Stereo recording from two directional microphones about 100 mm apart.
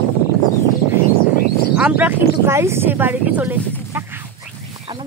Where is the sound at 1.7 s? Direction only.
15° right (ahead or behind).